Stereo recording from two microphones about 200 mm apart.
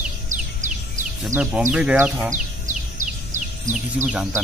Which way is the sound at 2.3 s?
40° right (ahead or behind).